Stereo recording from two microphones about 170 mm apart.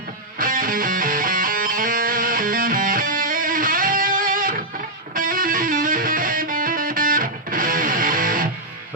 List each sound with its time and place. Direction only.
0.3 s music: 55° right (ahead or behind)